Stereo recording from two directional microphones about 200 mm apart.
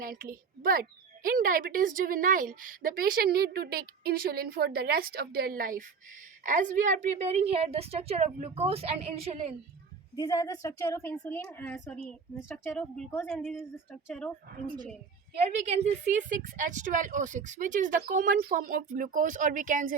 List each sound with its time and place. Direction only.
0.0 s a woman's voice: 45° right (ahead or behind)
10.2 s a woman's voice: 20° left (ahead or behind)
15.4 s a woman's voice: 35° right (ahead or behind)